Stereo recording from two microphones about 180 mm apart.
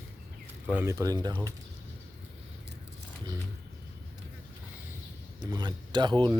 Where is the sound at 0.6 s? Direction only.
10° right (ahead or behind).